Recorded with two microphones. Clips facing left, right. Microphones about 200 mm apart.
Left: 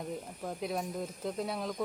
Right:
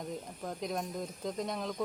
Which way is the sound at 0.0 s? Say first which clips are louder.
Left 1 dB; 5° left (ahead or behind).